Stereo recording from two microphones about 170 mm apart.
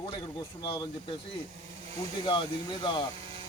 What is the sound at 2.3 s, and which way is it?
Speech, 25° left (ahead or behind).